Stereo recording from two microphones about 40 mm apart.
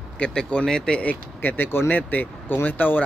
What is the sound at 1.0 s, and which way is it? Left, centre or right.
Speech, left.